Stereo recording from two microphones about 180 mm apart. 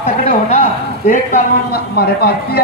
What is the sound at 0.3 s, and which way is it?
A man's voice, 45° left (ahead or behind).